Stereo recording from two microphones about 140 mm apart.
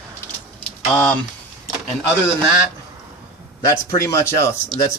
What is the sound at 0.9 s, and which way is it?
Speech, 10° left (ahead or behind).